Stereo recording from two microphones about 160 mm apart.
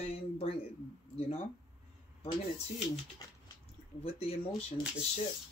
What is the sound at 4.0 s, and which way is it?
Speech, 40° left (ahead or behind).